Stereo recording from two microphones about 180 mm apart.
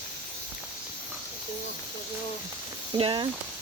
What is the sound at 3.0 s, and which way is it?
Speech, 30° right (ahead or behind).